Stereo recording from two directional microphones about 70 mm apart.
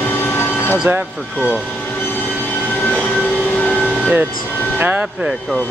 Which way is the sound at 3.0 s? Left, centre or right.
Centre.